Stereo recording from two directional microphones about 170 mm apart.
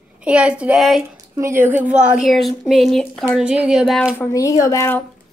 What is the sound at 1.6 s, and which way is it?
A woman's voice, 10° right (ahead or behind).